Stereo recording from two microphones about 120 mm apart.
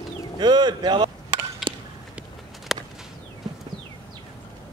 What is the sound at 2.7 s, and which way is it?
Whip, centre (ahead or behind).